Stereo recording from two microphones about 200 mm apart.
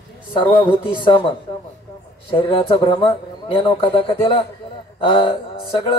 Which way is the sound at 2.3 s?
25° left (ahead or behind).